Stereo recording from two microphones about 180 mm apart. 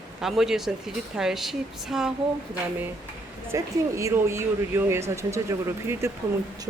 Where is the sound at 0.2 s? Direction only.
Centre (ahead or behind).